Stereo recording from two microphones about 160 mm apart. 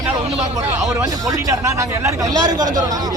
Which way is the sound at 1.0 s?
20° right (ahead or behind).